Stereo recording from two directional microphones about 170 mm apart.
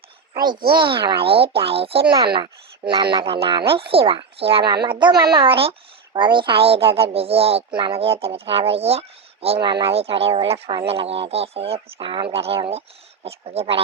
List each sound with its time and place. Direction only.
0.5 s a child's voice: 60° right (ahead or behind)
0.8 s speech: 30° right (ahead or behind)